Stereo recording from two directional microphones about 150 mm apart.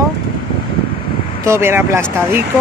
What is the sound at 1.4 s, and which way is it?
Speech, 15° right (ahead or behind).